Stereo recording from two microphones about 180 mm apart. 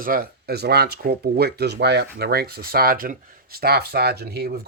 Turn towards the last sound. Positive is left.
turn(degrees=-60)  # may be behind; listen again after turning